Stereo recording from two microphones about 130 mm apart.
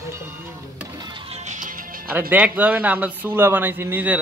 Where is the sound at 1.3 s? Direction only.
70° right (ahead or behind).